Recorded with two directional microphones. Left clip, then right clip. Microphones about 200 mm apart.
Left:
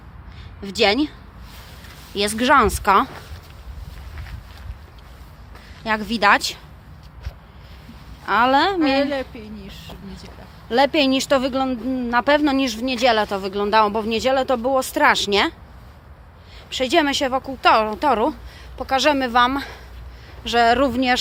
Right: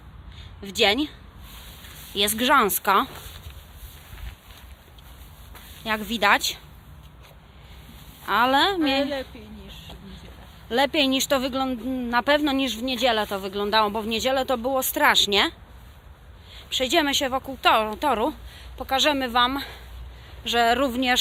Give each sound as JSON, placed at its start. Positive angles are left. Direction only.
{"t": 0.6, "sound": "speech", "side_deg": 0}
{"t": 2.1, "sound": "speech", "side_deg": 0}
{"t": 5.8, "sound": "speech", "side_deg": 0}
{"t": 8.2, "sound": "speech", "side_deg": -5}
{"t": 8.8, "sound": "a woman's voice", "side_deg": 25}
{"t": 10.7, "sound": "speech", "side_deg": 0}
{"t": 16.7, "sound": "speech", "side_deg": -5}